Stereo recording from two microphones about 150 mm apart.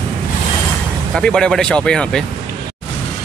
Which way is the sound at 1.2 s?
5° left (ahead or behind).